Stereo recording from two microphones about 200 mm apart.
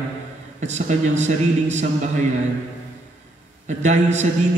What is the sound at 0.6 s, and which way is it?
A man's voice, 35° right (ahead or behind).